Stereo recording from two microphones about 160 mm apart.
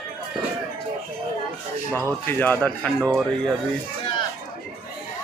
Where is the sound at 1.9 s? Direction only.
15° right (ahead or behind).